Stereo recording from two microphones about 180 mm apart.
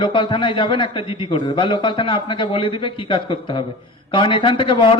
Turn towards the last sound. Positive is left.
turn(degrees=30)  # may be behind; listen again after turning